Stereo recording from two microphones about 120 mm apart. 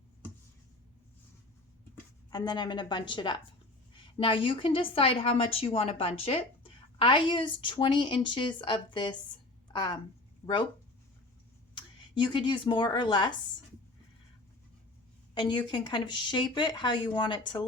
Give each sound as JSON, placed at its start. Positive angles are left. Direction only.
{"t": 2.3, "sound": "a woman's voice", "side_deg": 35}
{"t": 10.4, "sound": "speech", "side_deg": 20}
{"t": 11.7, "sound": "speech", "side_deg": 40}
{"t": 15.4, "sound": "speech", "side_deg": 35}